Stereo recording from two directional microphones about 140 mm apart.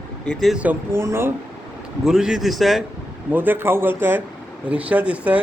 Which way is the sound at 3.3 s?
15° right (ahead or behind).